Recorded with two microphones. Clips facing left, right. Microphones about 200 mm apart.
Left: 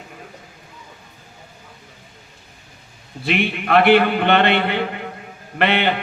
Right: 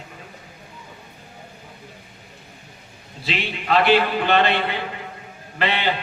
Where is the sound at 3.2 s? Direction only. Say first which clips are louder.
Left 4 dB; 60° left (ahead or behind).